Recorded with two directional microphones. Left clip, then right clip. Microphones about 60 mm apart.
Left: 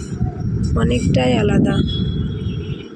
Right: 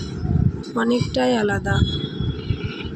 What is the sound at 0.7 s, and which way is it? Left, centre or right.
A man's voice, centre.